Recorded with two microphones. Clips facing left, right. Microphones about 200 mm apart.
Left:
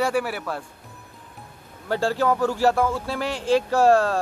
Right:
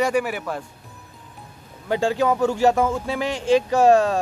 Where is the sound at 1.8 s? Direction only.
15° right (ahead or behind).